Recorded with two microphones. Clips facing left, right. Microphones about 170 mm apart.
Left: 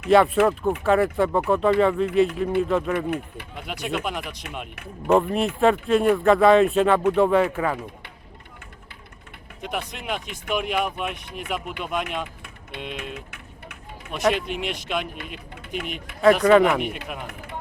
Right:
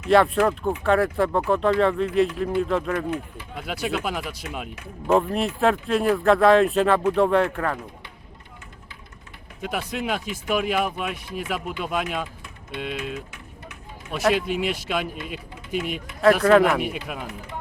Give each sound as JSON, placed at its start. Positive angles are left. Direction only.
{"t": 0.1, "sound": "speech", "side_deg": 0}
{"t": 9.6, "sound": "speech", "side_deg": -5}
{"t": 13.0, "sound": "vehicle", "side_deg": 60}
{"t": 14.2, "sound": "speech", "side_deg": -5}